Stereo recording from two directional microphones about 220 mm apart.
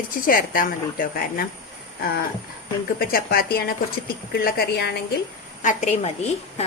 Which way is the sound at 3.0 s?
40° left (ahead or behind).